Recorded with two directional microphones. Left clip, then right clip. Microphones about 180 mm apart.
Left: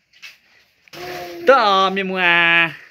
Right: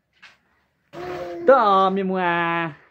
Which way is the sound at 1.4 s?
5° right (ahead or behind).